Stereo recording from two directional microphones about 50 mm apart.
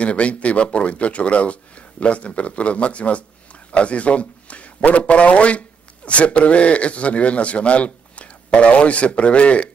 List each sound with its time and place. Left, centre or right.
0.0 s a man's voice: left